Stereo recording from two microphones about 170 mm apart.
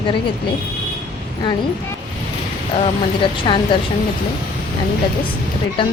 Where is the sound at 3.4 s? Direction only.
30° left (ahead or behind).